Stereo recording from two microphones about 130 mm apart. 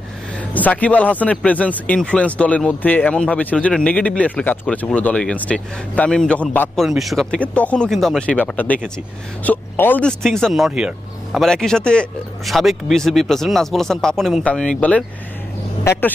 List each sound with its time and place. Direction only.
0.4 s speech: 10° left (ahead or behind)
6.8 s speech: centre (ahead or behind)
11.4 s speech: 5° left (ahead or behind)
15.8 s speech: 20° left (ahead or behind)